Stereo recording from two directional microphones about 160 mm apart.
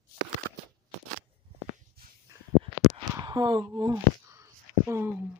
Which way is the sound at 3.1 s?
25° right (ahead or behind).